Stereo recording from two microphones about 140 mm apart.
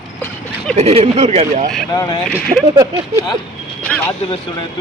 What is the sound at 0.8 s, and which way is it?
Speech, 45° right (ahead or behind).